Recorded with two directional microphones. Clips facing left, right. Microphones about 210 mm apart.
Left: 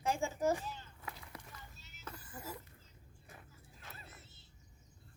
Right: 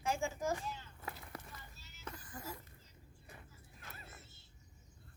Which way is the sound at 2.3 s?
5° left (ahead or behind).